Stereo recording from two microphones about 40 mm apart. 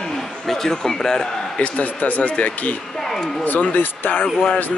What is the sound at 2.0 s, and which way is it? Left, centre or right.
Speech, left.